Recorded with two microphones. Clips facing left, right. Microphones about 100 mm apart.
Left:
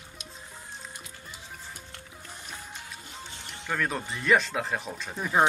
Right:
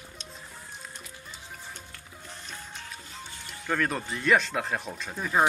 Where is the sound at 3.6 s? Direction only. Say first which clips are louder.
Right 2 dB; centre (ahead or behind).